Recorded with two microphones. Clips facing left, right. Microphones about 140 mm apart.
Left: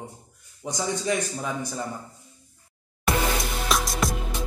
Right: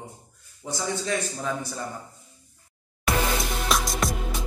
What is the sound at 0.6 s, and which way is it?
A man's voice, 20° left (ahead or behind).